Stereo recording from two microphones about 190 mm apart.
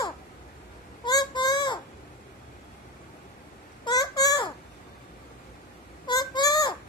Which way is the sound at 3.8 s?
20° left (ahead or behind).